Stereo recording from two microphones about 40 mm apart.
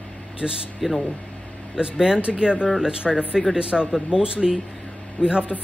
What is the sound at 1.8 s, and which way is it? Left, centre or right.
Speech, right.